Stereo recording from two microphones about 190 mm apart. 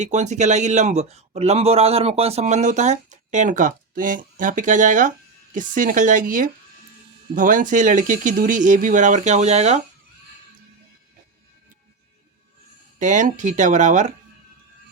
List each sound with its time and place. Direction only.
0.0 s speech: 40° right (ahead or behind)
13.0 s speech: 40° right (ahead or behind)